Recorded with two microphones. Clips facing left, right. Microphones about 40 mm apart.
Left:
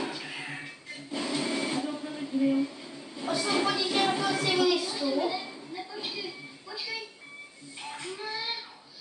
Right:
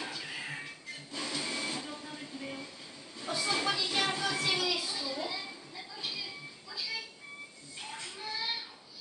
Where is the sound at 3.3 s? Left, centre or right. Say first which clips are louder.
Left 5 dB; centre.